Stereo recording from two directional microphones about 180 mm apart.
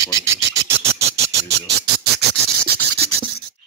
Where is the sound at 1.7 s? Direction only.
65° right (ahead or behind).